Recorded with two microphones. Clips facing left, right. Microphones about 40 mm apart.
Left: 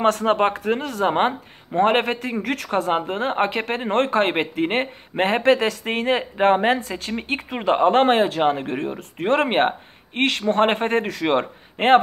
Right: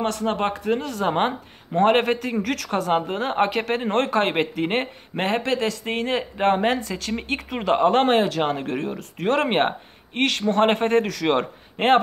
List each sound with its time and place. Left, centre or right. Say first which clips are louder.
0.0 s speech: left 5 dB; left
1.0 s a man's voice: left 4 dB; centre
2.9 s a man's voice: even; centre
3.4 s speech: even; left
3.7 s a man's voice: left 1 dB; centre
5.2 s a man's voice: left 5 dB; left; by 12.0 s centre